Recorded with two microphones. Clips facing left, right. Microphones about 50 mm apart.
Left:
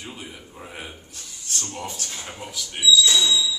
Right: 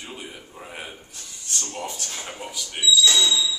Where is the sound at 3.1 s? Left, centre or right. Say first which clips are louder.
Even; right.